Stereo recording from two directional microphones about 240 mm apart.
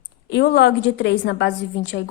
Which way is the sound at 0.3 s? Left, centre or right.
Left.